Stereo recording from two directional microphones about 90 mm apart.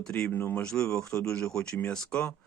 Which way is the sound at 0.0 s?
10° left (ahead or behind).